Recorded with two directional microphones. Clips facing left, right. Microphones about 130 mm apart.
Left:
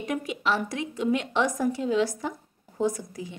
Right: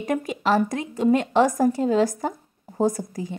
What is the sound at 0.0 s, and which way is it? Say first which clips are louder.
A woman's voice: right 4 dB; 45° right (ahead or behind).